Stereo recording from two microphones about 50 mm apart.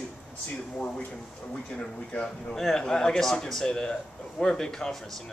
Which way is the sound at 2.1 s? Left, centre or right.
Centre.